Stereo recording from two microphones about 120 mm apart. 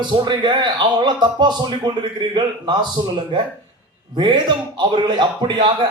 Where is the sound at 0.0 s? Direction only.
40° right (ahead or behind).